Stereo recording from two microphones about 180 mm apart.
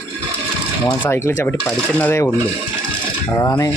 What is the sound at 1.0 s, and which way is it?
Speech, 15° left (ahead or behind).